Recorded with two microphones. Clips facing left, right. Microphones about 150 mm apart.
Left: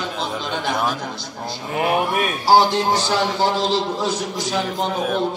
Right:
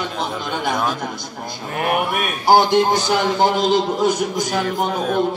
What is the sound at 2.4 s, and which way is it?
A man's voice, 20° right (ahead or behind).